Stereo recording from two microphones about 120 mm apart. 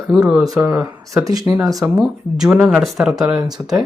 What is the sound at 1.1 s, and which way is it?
Speech, 25° right (ahead or behind).